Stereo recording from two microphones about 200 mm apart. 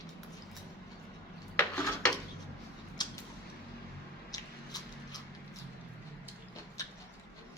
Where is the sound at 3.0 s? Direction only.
20° left (ahead or behind).